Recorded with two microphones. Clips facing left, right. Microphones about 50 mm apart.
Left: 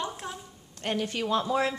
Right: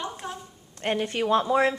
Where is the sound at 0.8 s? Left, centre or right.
Right.